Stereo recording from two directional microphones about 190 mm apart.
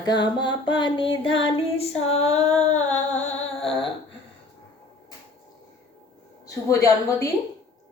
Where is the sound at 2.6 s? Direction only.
35° left (ahead or behind).